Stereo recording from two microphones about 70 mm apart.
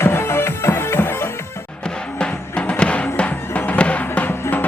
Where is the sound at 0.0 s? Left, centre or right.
Left.